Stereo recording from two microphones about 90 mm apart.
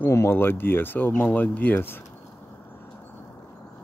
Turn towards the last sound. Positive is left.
turn(degrees=20)  # may be behind; listen again after turning